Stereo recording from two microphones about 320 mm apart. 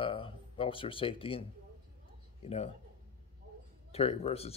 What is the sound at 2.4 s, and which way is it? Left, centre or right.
Speech, centre.